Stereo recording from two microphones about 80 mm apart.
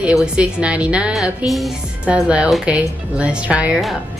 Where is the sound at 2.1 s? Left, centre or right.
Centre.